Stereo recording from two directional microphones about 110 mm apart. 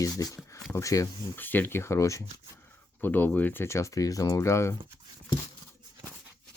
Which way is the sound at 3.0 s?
15° left (ahead or behind).